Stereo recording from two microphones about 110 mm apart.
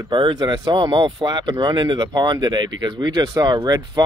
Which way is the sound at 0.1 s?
40° right (ahead or behind).